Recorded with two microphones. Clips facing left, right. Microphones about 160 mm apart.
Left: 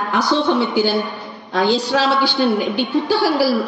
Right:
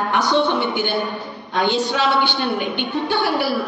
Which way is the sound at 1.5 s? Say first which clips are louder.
Left 3 dB; 40° left (ahead or behind).